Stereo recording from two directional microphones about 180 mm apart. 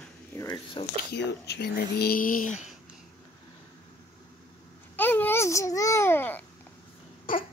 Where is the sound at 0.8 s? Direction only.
25° left (ahead or behind).